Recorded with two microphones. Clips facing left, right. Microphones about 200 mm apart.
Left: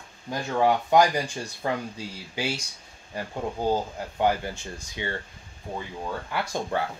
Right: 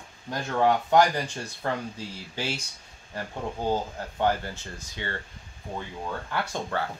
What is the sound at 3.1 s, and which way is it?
Speech, 15° left (ahead or behind).